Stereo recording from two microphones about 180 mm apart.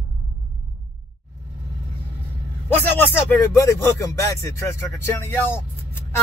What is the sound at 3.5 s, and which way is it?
Speech, 15° left (ahead or behind).